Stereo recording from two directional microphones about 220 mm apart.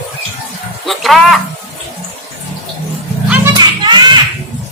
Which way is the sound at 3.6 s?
20° right (ahead or behind).